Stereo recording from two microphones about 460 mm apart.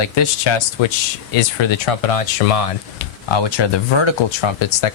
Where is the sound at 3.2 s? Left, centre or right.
Left.